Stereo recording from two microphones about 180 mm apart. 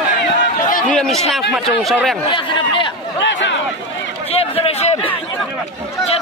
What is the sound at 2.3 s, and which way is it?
Speech, 25° left (ahead or behind).